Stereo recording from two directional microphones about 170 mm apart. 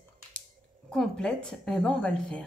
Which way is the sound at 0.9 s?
5° left (ahead or behind).